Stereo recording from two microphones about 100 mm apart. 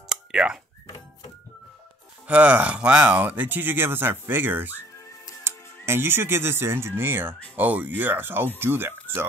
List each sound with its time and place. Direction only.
0.1 s a sound: 10° right (ahead or behind)
2.2 s speech: 15° right (ahead or behind)
5.9 s speech: 20° right (ahead or behind)